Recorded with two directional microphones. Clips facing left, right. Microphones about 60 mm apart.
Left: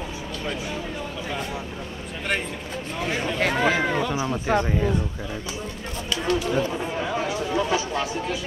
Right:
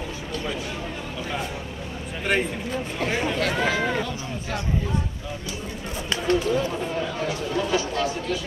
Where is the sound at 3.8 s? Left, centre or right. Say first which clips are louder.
Left 1 dB; centre.